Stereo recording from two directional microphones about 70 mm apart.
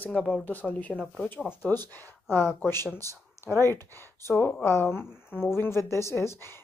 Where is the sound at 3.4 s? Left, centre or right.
Left.